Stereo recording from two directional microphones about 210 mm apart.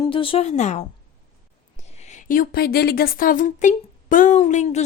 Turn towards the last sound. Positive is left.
turn(degrees=35)  # may be behind; listen again after turning